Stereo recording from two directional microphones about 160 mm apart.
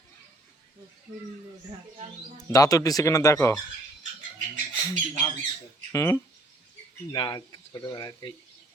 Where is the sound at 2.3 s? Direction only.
20° left (ahead or behind).